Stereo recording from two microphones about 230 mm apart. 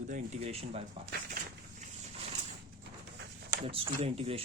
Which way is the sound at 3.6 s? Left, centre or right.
Right.